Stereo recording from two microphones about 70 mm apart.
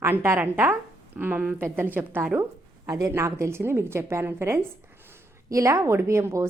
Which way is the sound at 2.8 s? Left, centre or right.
Right.